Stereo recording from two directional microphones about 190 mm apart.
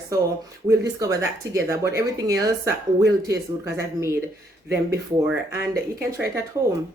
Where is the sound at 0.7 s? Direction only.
20° right (ahead or behind).